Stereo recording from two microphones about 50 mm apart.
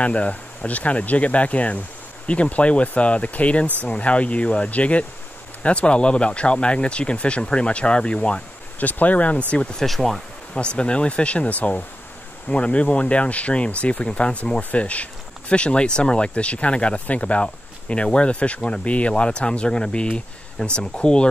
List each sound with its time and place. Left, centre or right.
0.0 s speech: left
8.7 s speech: left
9.8 s speech: centre
10.5 s speech: left